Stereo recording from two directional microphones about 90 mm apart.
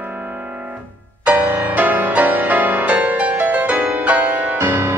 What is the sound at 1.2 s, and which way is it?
Music, 20° right (ahead or behind).